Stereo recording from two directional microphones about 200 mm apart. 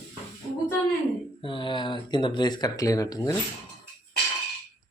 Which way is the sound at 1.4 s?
25° left (ahead or behind).